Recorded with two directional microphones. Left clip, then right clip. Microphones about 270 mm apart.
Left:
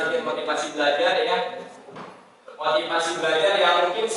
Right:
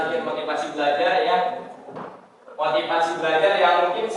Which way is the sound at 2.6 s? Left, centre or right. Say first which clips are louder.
Right 2 dB; centre.